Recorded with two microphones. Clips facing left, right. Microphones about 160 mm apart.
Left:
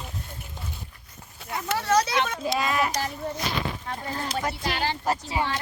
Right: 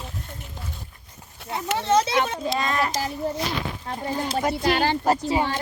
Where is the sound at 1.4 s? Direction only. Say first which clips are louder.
Right 2 dB; 25° right (ahead or behind).